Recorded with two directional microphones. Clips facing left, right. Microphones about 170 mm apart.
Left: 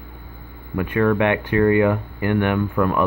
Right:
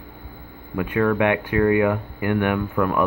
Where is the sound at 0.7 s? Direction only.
10° right (ahead or behind).